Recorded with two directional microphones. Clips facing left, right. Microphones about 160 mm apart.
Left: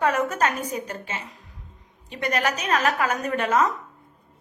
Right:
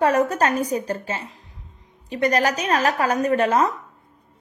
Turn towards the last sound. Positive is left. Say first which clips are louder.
# right 4 dB
turn(degrees=-35)  # may be behind; listen again after turning